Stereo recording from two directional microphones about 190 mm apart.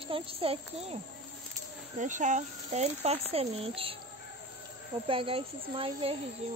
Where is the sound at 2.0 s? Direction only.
40° right (ahead or behind).